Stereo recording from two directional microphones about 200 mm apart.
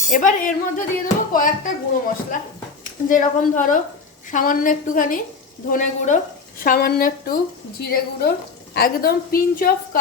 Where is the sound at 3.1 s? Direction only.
40° left (ahead or behind).